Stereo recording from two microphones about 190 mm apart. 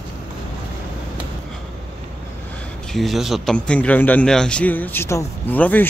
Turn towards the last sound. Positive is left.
turn(degrees=10)  # may be behind; listen again after turning